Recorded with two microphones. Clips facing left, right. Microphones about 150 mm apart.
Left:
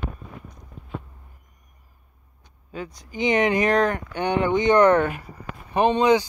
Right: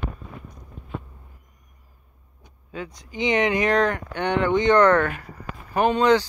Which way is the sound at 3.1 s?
45° left (ahead or behind).